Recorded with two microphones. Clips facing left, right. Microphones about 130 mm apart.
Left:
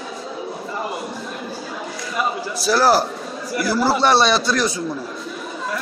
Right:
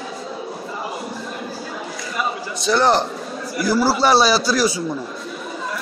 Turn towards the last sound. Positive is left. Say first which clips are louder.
# right 1 dB
turn(degrees=-5)  # may be behind; listen again after turning